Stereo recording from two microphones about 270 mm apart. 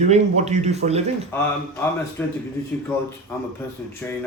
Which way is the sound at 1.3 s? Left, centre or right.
Centre.